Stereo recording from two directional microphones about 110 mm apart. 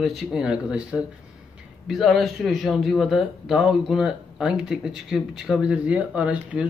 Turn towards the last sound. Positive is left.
turn(degrees=-10)  # may be behind; listen again after turning